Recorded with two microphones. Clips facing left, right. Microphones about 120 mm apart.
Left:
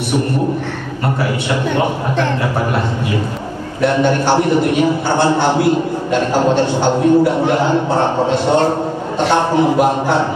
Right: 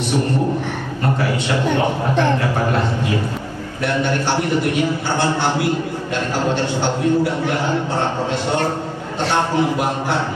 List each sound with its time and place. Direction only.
3.9 s a man's voice: 15° left (ahead or behind)